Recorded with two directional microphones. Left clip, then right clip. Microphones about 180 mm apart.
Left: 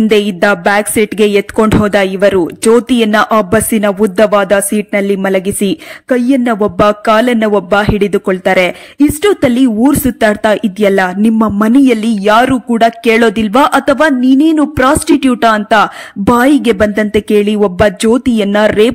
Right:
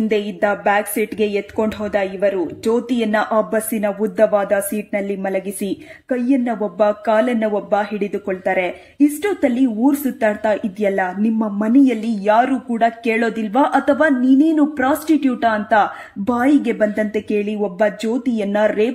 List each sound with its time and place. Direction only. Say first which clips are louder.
0.1 s speech: left 8 dB; 35° left (ahead or behind)